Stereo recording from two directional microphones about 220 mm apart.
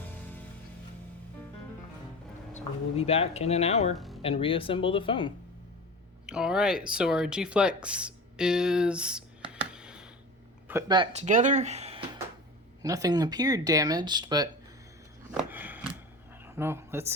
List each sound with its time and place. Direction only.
2.5 s speech: 30° left (ahead or behind)
3.9 s speech: centre (ahead or behind)
4.2 s speech: 25° left (ahead or behind)
6.2 s speech: 5° right (ahead or behind)
9.5 s a sound: 5° right (ahead or behind)
10.7 s speech: 15° right (ahead or behind)
12.8 s speech: 15° right (ahead or behind)
15.4 s a sound: 10° right (ahead or behind)
16.4 s speech: 10° right (ahead or behind)